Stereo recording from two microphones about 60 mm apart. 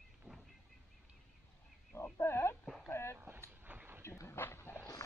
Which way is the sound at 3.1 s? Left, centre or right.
Right.